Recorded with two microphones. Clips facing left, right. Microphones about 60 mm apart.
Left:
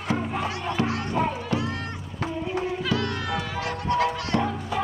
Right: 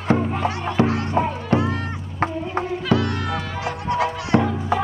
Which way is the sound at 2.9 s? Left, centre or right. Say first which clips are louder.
Right 9 dB; centre.